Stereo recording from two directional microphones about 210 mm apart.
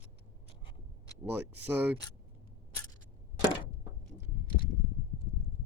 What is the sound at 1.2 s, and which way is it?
Speech, 10° right (ahead or behind).